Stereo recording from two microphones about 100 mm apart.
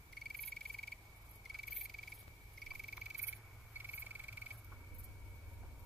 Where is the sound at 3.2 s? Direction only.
20° right (ahead or behind).